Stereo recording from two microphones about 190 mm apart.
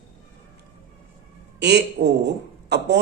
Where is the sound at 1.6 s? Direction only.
65° right (ahead or behind).